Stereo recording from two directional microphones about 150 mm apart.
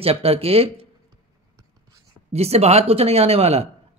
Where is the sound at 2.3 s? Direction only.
45° right (ahead or behind).